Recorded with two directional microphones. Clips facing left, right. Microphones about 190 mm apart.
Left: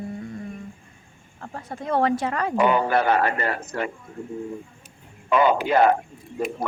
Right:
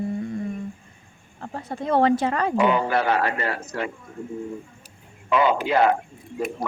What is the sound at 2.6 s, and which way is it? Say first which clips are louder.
A man's voice: left 2 dB; 50° left (ahead or behind).